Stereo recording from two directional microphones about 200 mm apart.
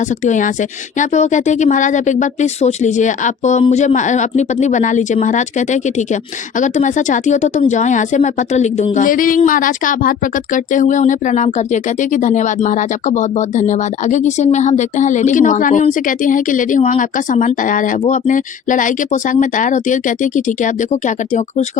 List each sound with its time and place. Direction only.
0.3 s speech: 40° left (ahead or behind)